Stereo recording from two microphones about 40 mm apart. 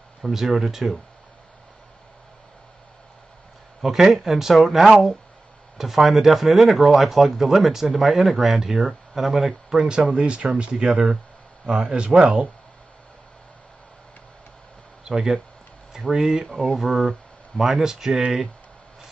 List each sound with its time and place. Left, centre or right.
0.2 s speech: centre
3.8 s speech: centre
10.1 s speech: right
15.0 s speech: centre